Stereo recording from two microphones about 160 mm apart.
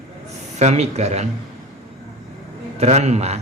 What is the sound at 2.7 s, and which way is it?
Speech, 45° right (ahead or behind).